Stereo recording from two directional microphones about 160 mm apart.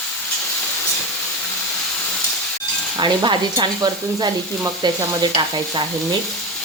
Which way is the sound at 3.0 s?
30° right (ahead or behind).